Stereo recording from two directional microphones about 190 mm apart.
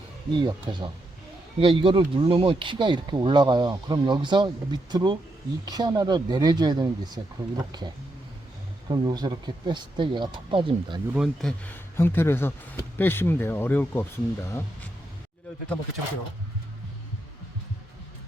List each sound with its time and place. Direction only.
0.4 s speech: 25° right (ahead or behind)
11.1 s speech: centre (ahead or behind)
11.6 s speech: 10° left (ahead or behind)